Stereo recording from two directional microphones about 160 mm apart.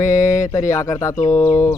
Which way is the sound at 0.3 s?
20° left (ahead or behind).